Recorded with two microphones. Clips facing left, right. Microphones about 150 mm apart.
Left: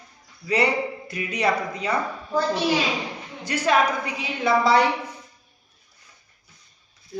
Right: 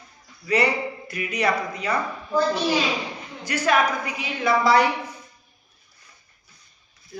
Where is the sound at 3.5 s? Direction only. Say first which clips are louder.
Even; 25° left (ahead or behind).